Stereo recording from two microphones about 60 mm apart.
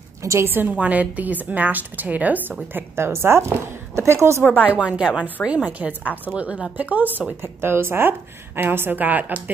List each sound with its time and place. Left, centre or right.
0.2 s a woman's voice: right
0.5 s speech: right
0.7 s a woman's voice: right
2.7 s a woman's voice: right
4.4 s speech: left
4.6 s a woman's voice: centre